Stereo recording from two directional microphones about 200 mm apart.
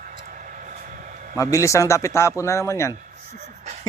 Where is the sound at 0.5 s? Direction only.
40° right (ahead or behind).